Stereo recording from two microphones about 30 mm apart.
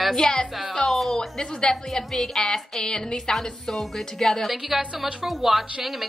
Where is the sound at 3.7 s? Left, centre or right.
Centre.